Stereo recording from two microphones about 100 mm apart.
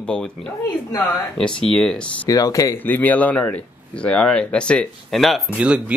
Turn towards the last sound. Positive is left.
turn(degrees=-10)  # may be behind; listen again after turning